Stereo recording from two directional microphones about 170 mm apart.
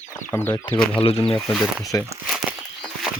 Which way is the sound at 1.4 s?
Centre (ahead or behind).